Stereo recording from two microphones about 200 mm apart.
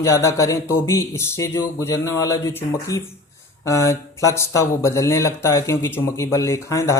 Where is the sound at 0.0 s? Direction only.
15° left (ahead or behind).